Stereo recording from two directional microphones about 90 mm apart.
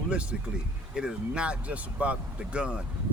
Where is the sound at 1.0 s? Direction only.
10° right (ahead or behind).